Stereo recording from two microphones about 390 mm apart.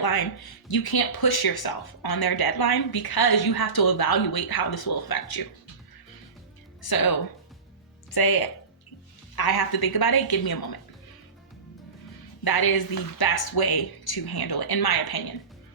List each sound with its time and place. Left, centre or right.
0.0 s speech: left
6.8 s speech: left
12.5 s speech: left